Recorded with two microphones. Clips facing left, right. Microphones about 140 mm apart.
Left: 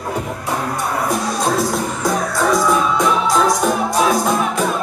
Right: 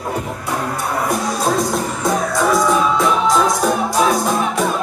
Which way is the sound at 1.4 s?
Centre (ahead or behind).